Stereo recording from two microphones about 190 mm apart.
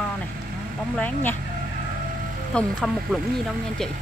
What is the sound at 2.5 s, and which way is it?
Speech, centre (ahead or behind).